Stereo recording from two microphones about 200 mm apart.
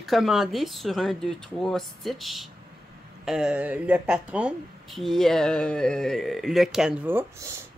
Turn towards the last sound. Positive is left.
turn(degrees=-10)  # may be behind; listen again after turning